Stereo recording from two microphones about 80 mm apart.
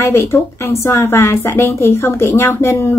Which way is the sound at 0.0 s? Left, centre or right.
Left.